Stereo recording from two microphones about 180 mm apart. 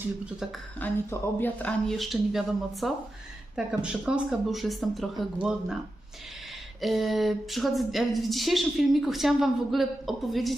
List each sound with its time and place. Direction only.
0.8 s speech: 10° left (ahead or behind)
6.8 s speech: centre (ahead or behind)